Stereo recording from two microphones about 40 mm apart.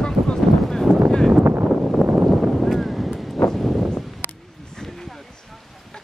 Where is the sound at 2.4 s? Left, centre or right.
Centre.